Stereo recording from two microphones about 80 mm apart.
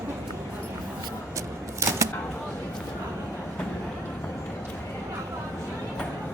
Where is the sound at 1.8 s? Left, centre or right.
Right.